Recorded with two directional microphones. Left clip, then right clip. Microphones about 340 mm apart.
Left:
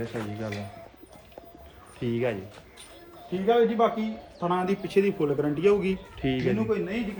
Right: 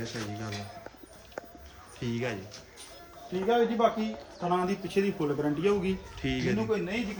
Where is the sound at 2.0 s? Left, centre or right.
Centre.